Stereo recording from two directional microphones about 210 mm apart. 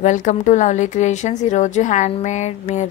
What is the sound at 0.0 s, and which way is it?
A woman's voice, 35° left (ahead or behind).